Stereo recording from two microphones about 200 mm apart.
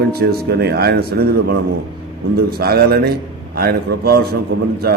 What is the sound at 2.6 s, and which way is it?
A man's voice, 50° right (ahead or behind).